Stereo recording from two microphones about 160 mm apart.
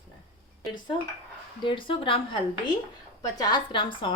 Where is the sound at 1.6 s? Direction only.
30° left (ahead or behind).